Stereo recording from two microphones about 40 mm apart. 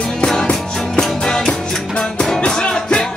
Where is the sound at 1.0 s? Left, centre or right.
Centre.